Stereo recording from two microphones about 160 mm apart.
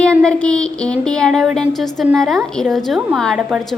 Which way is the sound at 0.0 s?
5° left (ahead or behind).